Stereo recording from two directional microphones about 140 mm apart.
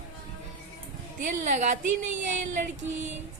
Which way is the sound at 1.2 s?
60° right (ahead or behind).